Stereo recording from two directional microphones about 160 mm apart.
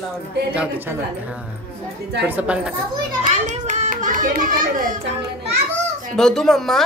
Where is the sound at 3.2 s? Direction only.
50° right (ahead or behind).